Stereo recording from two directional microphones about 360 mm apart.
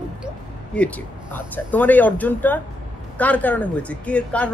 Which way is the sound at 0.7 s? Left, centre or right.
Centre.